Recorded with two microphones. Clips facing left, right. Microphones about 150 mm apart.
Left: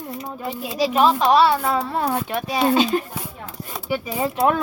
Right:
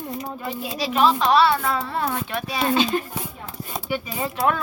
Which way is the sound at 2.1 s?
40° left (ahead or behind).